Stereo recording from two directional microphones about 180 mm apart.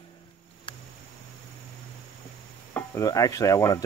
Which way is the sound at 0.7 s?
25° left (ahead or behind).